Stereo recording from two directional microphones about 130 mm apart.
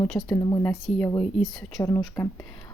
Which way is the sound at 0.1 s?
30° left (ahead or behind).